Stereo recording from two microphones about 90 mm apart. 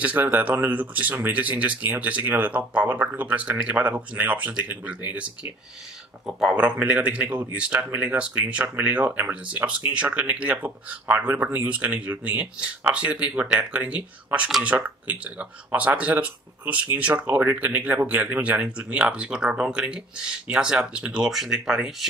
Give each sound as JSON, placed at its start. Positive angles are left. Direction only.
{"t": 0.0, "sound": "speech", "side_deg": -15}